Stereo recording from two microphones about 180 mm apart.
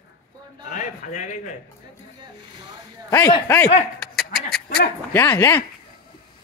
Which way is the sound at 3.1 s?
15° left (ahead or behind).